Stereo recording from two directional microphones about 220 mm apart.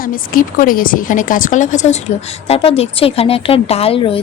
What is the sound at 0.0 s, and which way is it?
Speech, 40° left (ahead or behind).